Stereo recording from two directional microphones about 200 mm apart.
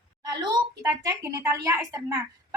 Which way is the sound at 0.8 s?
15° right (ahead or behind).